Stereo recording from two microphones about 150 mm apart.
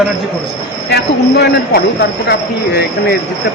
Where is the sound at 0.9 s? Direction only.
90° left.